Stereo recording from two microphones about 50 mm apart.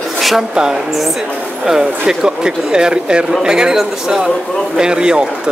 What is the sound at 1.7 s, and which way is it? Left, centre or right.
Speech, centre.